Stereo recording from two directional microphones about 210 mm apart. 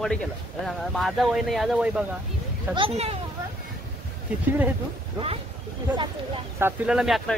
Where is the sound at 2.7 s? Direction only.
25° right (ahead or behind).